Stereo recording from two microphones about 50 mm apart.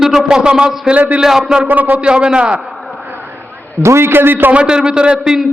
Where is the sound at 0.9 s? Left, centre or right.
Right.